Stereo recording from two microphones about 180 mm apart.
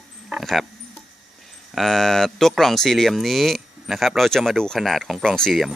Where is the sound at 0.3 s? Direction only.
Centre (ahead or behind).